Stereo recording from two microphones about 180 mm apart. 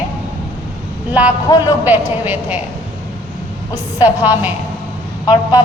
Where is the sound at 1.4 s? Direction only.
20° left (ahead or behind).